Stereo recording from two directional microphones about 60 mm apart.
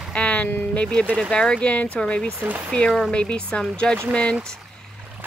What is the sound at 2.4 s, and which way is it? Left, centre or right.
Speech, right.